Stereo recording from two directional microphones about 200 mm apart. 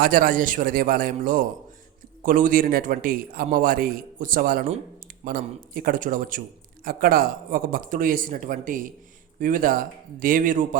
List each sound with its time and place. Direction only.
0.0 s a man's voice: 45° right (ahead or behind)